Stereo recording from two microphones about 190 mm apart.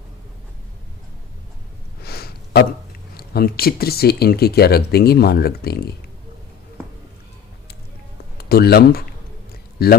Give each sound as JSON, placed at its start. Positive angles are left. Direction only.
{"t": 2.0, "sound": "a sound", "side_deg": 55}
{"t": 3.2, "sound": "speech", "side_deg": 55}
{"t": 8.4, "sound": "speech", "side_deg": 55}